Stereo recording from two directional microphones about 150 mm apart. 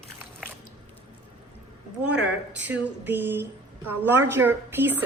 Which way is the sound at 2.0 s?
10° right (ahead or behind).